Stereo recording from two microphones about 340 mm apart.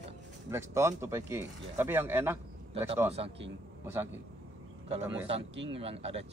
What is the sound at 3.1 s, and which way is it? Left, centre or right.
Speech, centre.